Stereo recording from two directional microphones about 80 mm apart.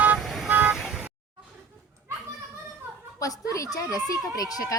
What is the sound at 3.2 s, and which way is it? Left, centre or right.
A woman's voice, left.